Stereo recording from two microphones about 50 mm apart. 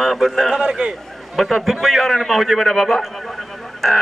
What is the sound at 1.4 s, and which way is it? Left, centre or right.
A man's voice, centre.